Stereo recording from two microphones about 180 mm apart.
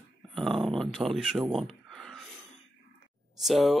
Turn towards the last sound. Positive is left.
turn(degrees=0)  # may be behind; listen again after turning